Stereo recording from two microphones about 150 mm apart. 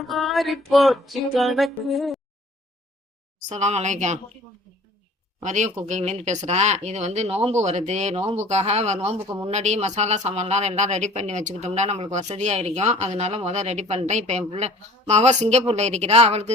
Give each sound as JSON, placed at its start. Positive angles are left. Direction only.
{"t": 0.0, "sound": "music", "side_deg": 0}
{"t": 3.5, "sound": "speech", "side_deg": -50}
{"t": 5.4, "sound": "speech", "side_deg": -55}